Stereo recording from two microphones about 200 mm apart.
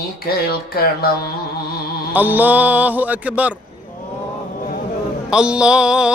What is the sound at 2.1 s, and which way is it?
Speech, 10° right (ahead or behind).